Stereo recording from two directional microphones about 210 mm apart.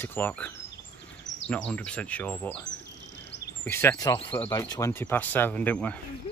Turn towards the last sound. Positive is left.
turn(degrees=5)  # may be behind; listen again after turning